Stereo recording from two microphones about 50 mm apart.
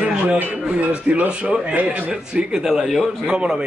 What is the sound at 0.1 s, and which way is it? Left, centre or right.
A man's voice, right.